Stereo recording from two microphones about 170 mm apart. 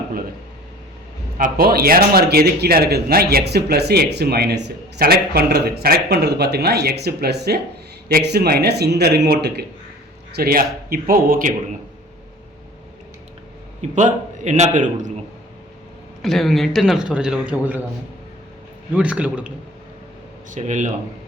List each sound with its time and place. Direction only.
1.4 s speech: 60° right (ahead or behind)
10.3 s a man's voice: 60° right (ahead or behind)
13.9 s a man's voice: 45° right (ahead or behind)
16.2 s a man's voice: centre (ahead or behind)
18.9 s a man's voice: 5° right (ahead or behind)
20.5 s speech: 45° right (ahead or behind)